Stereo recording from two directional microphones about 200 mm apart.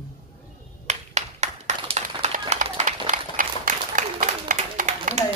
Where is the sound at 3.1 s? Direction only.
40° right (ahead or behind).